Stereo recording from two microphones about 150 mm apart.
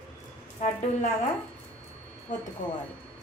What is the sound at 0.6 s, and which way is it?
Speech, 45° left (ahead or behind).